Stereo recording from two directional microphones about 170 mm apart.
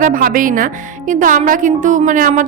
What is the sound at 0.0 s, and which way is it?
A woman's voice, 55° right (ahead or behind).